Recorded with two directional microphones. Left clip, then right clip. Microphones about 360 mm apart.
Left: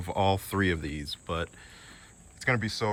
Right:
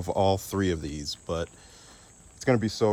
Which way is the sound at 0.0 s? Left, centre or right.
Centre.